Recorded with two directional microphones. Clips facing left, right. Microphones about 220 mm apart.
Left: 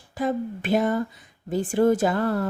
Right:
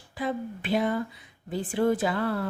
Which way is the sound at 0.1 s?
45° left (ahead or behind).